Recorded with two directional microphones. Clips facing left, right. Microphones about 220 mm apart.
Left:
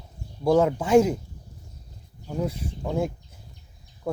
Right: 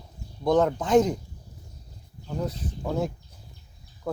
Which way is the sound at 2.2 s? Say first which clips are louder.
Left 2 dB; 10° left (ahead or behind).